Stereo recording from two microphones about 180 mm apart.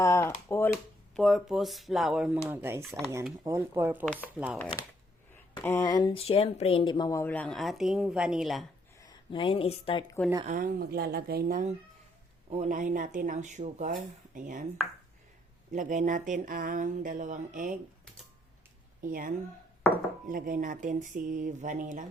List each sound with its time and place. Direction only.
0.0 s speech: 15° left (ahead or behind)
1.1 s speech: centre (ahead or behind)
4.4 s speech: 5° left (ahead or behind)
5.6 s speech: 15° left (ahead or behind); by 8.6 s centre (ahead or behind)
9.0 s speech: 25° left (ahead or behind)
10.4 s speech: 50° right (ahead or behind)
12.5 s speech: 40° right (ahead or behind)
15.7 s speech: 45° right (ahead or behind)
19.0 s speech: 45° right (ahead or behind)